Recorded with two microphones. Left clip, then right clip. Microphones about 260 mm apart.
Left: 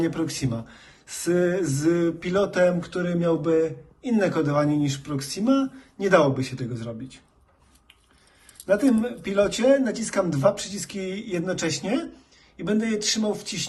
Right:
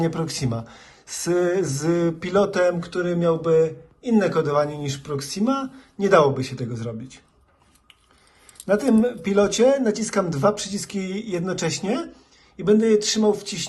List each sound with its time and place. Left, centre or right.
0.0 s speech: centre
8.7 s speech: right